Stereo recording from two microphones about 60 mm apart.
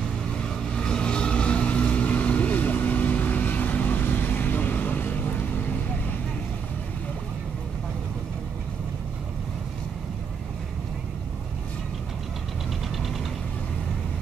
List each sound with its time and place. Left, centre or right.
0.7 s vehicle: centre; by 5.2 s left